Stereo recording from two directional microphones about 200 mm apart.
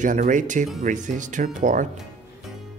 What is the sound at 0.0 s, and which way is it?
Speech, 40° right (ahead or behind).